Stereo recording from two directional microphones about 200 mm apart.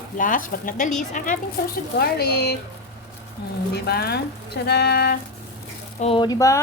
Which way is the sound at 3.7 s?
55° left (ahead or behind).